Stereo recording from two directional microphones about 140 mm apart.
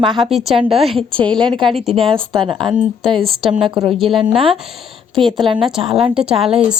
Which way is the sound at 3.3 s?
40° right (ahead or behind).